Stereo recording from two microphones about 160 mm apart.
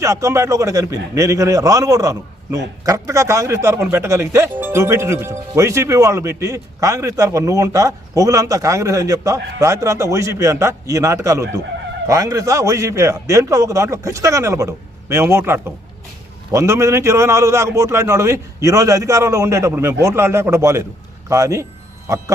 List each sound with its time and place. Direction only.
0.0 s a man's voice: 20° right (ahead or behind)